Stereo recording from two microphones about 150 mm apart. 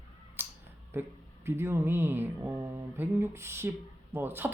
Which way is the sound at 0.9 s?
15° right (ahead or behind).